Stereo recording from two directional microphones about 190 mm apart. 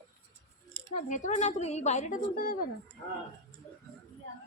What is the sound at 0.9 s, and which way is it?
A woman's voice, 40° left (ahead or behind).